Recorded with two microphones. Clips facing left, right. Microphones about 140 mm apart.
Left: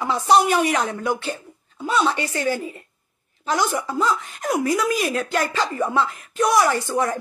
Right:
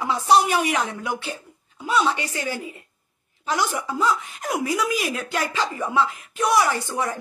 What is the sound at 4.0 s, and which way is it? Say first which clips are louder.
Speech: right 1 dB; 10° right (ahead or behind).